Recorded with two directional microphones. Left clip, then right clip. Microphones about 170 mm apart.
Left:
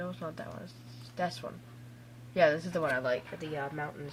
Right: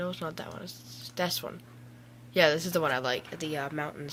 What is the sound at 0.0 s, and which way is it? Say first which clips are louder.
Speech: right 4 dB; 15° right (ahead or behind).